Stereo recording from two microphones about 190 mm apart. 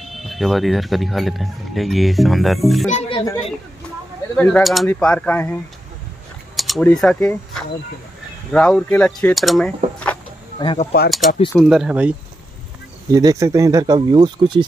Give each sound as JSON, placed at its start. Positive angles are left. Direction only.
{"t": 0.0, "sound": "speech", "side_deg": 0}
{"t": 2.9, "sound": "speech", "side_deg": 35}
{"t": 4.4, "sound": "speech", "side_deg": 10}
{"t": 6.5, "sound": "speech", "side_deg": 0}
{"t": 10.6, "sound": "speech", "side_deg": 25}
{"t": 11.1, "sound": "speech", "side_deg": 0}
{"t": 13.1, "sound": "speech", "side_deg": -15}